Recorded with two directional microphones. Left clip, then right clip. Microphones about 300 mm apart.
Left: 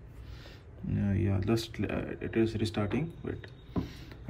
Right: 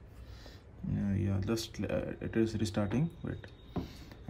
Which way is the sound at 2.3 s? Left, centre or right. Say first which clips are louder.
Left 3 dB; right.